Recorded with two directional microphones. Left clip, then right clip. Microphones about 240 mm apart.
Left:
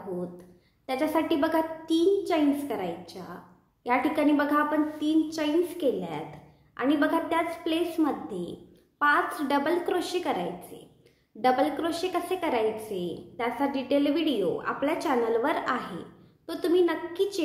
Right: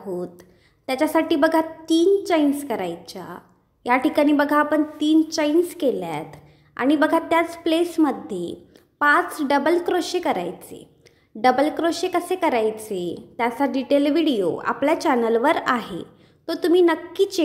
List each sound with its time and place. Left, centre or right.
0.2 s a woman's voice: right